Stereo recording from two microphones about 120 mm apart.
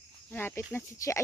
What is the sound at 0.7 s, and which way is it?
Speech, 25° left (ahead or behind).